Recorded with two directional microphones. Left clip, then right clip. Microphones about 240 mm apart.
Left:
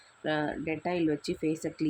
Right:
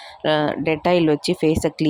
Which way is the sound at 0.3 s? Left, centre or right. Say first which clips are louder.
Right 12 dB; right.